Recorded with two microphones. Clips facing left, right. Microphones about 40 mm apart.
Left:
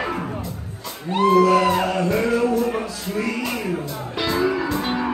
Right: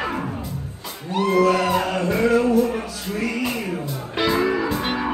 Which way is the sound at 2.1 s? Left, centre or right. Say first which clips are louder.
Right 5 dB; centre.